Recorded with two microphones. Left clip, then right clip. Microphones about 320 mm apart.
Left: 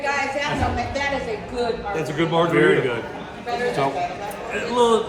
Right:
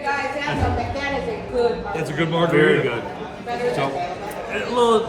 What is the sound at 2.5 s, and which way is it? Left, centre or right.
Speech, centre.